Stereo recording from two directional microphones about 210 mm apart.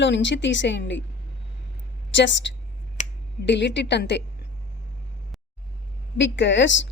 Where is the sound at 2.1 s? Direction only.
60° left (ahead or behind).